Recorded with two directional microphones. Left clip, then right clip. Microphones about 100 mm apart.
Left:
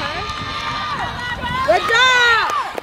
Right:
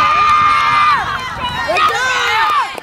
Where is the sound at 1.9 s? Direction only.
20° left (ahead or behind).